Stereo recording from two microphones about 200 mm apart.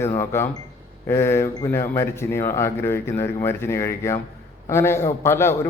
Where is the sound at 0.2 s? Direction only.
10° left (ahead or behind).